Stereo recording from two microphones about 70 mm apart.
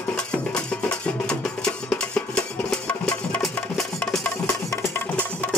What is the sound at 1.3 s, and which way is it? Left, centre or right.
Music, centre.